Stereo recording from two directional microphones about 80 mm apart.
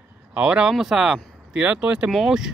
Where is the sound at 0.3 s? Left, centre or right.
Centre.